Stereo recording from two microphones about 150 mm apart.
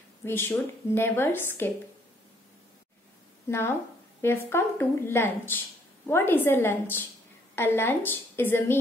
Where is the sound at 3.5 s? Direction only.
15° left (ahead or behind).